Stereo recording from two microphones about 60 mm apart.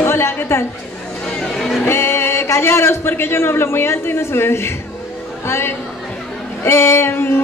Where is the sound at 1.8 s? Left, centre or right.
Left.